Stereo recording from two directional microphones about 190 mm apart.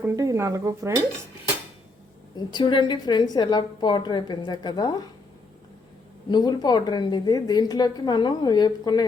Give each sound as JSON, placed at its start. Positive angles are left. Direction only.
{"t": 0.0, "sound": "speech", "side_deg": -15}
{"t": 2.3, "sound": "a woman's voice", "side_deg": 20}
{"t": 6.2, "sound": "a woman's voice", "side_deg": 20}